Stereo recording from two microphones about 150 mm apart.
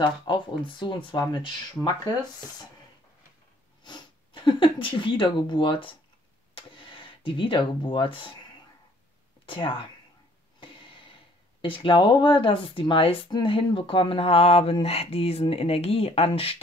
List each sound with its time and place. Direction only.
0.0 s speech: 35° left (ahead or behind)
1.8 s speech: centre (ahead or behind)
3.8 s speech: 30° left (ahead or behind)
9.5 s speech: 35° left (ahead or behind)
10.6 s a sound: 35° left (ahead or behind)
11.6 s speech: 35° left (ahead or behind)